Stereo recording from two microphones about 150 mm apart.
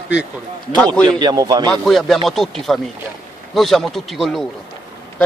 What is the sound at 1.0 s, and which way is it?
Speech, 25° right (ahead or behind).